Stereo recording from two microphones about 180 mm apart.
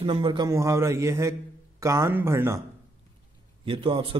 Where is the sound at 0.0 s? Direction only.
30° right (ahead or behind).